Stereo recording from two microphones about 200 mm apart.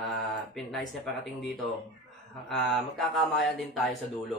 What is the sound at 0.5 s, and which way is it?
Speech, centre (ahead or behind).